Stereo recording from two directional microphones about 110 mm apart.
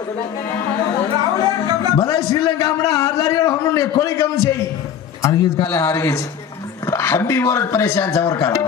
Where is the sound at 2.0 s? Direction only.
30° left (ahead or behind).